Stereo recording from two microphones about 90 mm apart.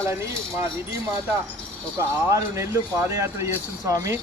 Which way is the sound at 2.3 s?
35° right (ahead or behind).